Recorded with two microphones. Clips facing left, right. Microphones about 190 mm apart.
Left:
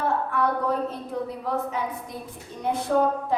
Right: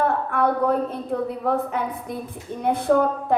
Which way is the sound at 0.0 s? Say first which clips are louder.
Right 3 dB; 55° right (ahead or behind).